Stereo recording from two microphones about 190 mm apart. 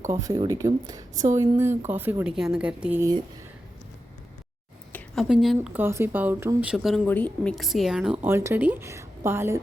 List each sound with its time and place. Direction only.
0.1 s speech: 20° right (ahead or behind)
1.1 s speech: 40° right (ahead or behind)
1.4 s speech: 15° right (ahead or behind)
4.9 s a sound: 10° left (ahead or behind)
5.3 s speech: centre (ahead or behind)